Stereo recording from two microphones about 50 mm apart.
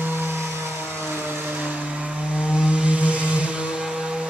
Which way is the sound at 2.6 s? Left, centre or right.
Right.